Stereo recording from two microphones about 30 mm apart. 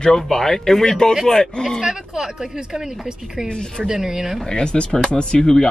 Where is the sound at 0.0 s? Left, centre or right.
Centre.